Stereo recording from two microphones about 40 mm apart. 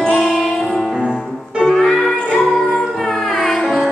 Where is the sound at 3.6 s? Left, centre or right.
Centre.